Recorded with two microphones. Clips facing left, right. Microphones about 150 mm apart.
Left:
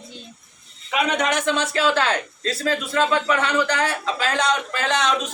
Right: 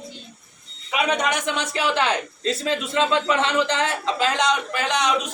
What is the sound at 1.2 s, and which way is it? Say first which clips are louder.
A man's voice: left 3 dB; 15° right (ahead or behind).